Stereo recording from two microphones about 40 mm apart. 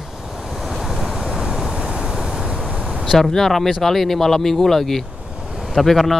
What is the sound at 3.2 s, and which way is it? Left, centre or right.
Speech, centre.